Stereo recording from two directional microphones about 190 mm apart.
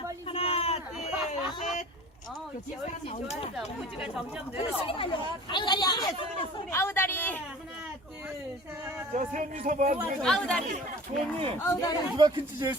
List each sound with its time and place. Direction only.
0.3 s a sound: 30° left (ahead or behind)
3.1 s speech: 35° left (ahead or behind)
3.5 s speech: centre (ahead or behind)
4.5 s speech: 30° left (ahead or behind); by 7.4 s 10° left (ahead or behind)
9.1 s speech: 40° right (ahead or behind)
10.2 s speech: 5° left (ahead or behind)
11.6 s speech: 15° left (ahead or behind)
12.1 s speech: 25° right (ahead or behind)